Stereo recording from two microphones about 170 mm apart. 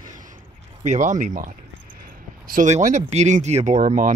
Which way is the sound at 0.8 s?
45° right (ahead or behind).